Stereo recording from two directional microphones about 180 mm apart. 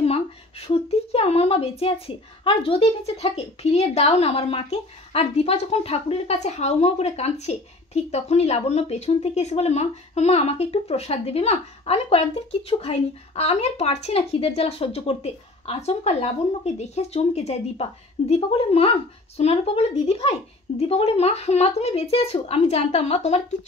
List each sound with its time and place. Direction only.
0.0 s speech: 35° left (ahead or behind)